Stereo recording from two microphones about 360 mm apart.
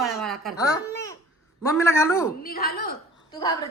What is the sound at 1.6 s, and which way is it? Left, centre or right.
Snicker, centre.